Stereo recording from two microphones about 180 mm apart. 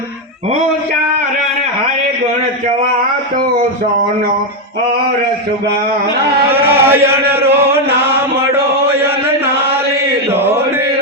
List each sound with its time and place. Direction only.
6.7 s chant: 10° right (ahead or behind)
8.9 s chant: 10° right (ahead or behind)
10.3 s chant: 10° right (ahead or behind)